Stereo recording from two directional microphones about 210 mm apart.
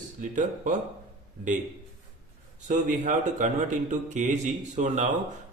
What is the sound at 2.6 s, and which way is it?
Speech, 35° right (ahead or behind).